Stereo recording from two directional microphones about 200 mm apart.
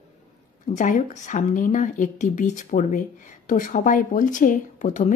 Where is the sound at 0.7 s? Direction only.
35° left (ahead or behind).